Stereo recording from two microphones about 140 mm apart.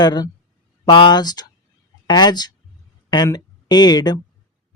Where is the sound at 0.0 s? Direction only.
30° left (ahead or behind).